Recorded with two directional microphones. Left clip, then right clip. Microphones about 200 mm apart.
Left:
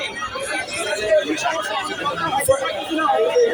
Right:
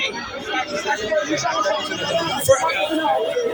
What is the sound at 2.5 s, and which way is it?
Speech, 30° left (ahead or behind).